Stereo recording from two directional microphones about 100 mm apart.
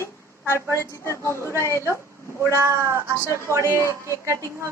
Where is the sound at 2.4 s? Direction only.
30° right (ahead or behind).